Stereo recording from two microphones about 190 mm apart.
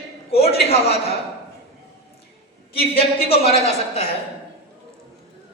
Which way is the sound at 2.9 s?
30° left (ahead or behind).